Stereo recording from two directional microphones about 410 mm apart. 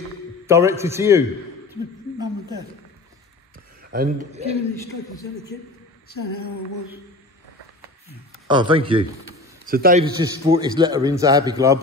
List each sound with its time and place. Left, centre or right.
0.5 s a man's voice: centre
1.7 s a sound: centre
3.9 s a man's voice: centre
8.5 s a man's voice: centre
9.7 s a man's voice: right